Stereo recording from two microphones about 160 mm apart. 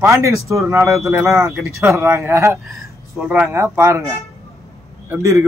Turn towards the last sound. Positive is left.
turn(degrees=-20)  # may be behind; listen again after turning